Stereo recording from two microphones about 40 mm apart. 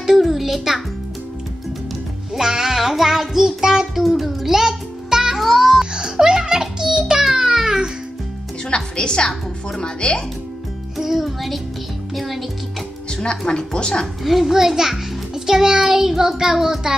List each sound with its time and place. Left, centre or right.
0.0 s music: centre
2.3 s music: centre
4.6 s music: centre
5.4 s music: centre
5.9 s a sound: centre
8.6 s a woman's voice: left
11.0 s a child's voice: centre
13.1 s a woman's voice: left
14.2 s a child's voice: centre